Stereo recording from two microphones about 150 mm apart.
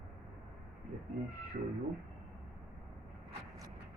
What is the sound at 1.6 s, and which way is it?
Speech, 60° right (ahead or behind).